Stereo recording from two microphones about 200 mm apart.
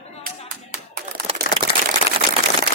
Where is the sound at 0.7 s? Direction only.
50° right (ahead or behind).